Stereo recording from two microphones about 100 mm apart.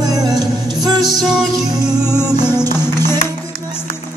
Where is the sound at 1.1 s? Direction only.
5° right (ahead or behind).